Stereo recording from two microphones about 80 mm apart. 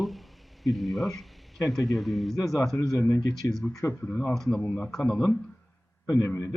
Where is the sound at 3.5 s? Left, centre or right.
Centre.